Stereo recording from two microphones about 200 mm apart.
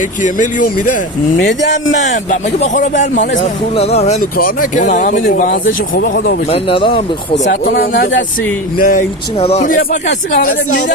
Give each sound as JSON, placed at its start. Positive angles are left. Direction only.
{"t": 1.9, "sound": "speech", "side_deg": 40}
{"t": 4.2, "sound": "speech", "side_deg": 45}
{"t": 6.5, "sound": "speech", "side_deg": 25}
{"t": 7.7, "sound": "speech", "side_deg": 45}
{"t": 9.4, "sound": "speech", "side_deg": 30}